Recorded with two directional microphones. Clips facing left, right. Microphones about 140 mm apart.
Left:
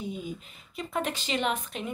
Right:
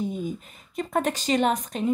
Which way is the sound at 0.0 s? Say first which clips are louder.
Right 6 dB; 45° right (ahead or behind).